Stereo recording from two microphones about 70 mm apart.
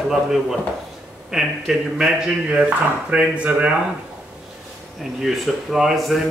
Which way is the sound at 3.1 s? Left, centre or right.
Centre.